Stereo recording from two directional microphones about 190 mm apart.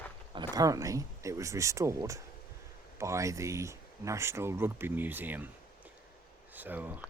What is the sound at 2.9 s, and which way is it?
Speech, 15° right (ahead or behind).